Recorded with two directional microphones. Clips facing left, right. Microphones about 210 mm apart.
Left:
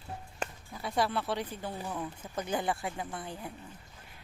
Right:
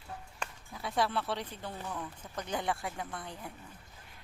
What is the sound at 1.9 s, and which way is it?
Speech, 20° left (ahead or behind).